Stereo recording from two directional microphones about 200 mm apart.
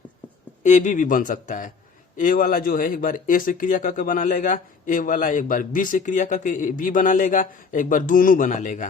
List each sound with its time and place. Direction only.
0.6 s a man's voice: 40° left (ahead or behind)